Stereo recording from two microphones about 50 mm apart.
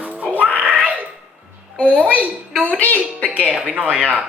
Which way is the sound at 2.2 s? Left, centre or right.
Right.